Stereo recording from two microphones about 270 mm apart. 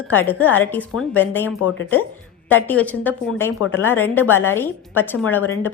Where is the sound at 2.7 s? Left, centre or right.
Centre.